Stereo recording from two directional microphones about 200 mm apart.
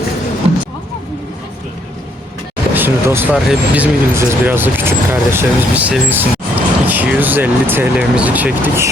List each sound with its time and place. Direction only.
0.4 s music: 30° right (ahead or behind)
2.7 s speech: 10° right (ahead or behind)